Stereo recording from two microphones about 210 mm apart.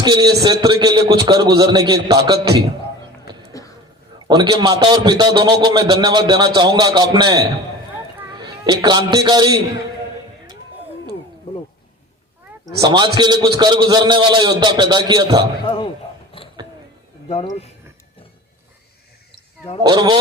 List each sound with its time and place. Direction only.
0.0 s a man's voice: 20° right (ahead or behind)
3.5 s a sound: 15° left (ahead or behind)
4.3 s a man's voice: 20° right (ahead or behind)
12.6 s a man's voice: 20° right (ahead or behind)
15.6 s speech: 25° left (ahead or behind)
16.4 s a sound: 25° left (ahead or behind)
17.2 s speech: 30° left (ahead or behind)
19.9 s a man's voice: 20° right (ahead or behind)